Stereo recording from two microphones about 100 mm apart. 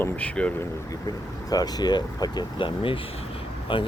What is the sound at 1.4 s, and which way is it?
Speech, 40° left (ahead or behind).